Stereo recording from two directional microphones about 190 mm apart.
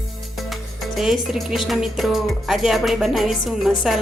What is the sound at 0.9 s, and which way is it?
Speech, centre (ahead or behind).